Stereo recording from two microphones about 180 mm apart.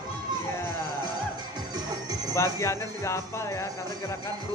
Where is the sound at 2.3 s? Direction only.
15° left (ahead or behind).